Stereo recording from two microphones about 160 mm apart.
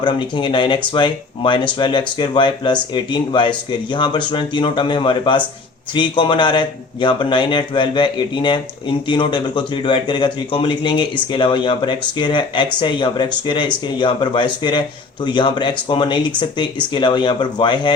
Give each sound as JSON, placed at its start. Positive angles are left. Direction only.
{"t": 0.0, "sound": "a man's voice", "side_deg": 30}